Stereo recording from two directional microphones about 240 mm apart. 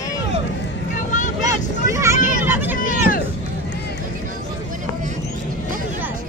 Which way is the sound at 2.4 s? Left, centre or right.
Centre.